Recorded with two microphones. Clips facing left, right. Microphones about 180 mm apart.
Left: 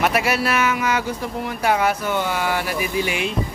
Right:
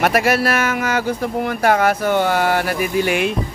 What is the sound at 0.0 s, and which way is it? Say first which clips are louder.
A man's voice: right 4 dB; 50° right (ahead or behind).